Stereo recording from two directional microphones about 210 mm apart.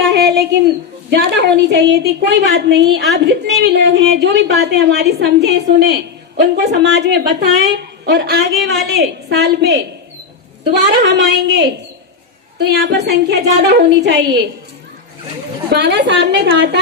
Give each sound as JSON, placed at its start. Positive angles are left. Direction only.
{"t": 0.2, "sound": "a sound", "side_deg": -50}
{"t": 1.1, "sound": "a woman's voice", "side_deg": -50}
{"t": 15.7, "sound": "a woman's voice", "side_deg": -55}